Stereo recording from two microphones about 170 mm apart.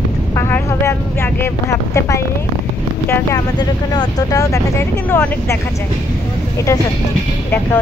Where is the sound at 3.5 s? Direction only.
25° left (ahead or behind).